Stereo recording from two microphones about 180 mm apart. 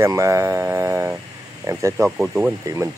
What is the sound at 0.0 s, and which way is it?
Speech, 15° right (ahead or behind).